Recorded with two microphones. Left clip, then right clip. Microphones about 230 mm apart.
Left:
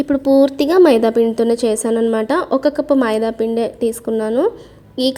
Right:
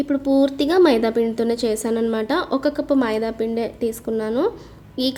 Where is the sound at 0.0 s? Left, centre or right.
Left.